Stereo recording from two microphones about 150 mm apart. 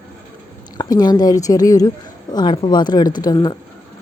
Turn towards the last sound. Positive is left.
turn(degrees=25)  # may be behind; listen again after turning